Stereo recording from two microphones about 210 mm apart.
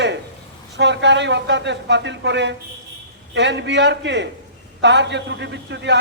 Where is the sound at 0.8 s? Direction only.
55° right (ahead or behind).